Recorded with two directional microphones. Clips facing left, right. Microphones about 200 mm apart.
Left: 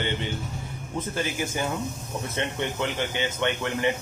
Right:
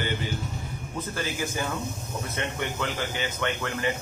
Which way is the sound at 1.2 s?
25° left (ahead or behind).